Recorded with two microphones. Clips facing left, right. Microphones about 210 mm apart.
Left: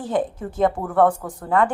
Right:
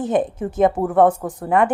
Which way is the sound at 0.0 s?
20° right (ahead or behind).